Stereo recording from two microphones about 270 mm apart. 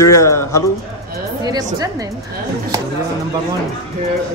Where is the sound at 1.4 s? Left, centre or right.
Centre.